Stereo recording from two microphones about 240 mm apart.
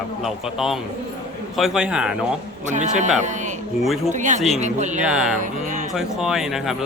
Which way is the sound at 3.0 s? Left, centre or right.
Right.